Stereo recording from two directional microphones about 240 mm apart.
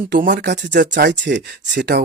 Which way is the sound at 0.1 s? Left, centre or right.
Right.